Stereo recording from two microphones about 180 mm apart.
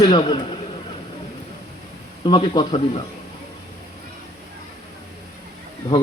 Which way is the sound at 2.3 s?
25° left (ahead or behind).